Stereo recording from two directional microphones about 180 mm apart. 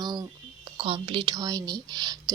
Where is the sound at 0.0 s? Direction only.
20° right (ahead or behind).